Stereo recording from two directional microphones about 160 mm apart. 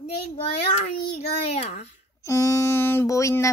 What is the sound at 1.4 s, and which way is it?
Speech, 45° left (ahead or behind).